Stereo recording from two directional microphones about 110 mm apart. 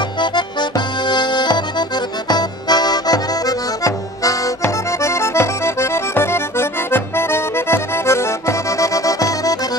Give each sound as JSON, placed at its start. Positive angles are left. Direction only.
{"t": 0.2, "sound": "accordion", "side_deg": 45}